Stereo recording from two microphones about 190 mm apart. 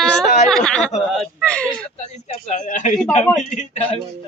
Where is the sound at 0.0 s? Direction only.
5° left (ahead or behind).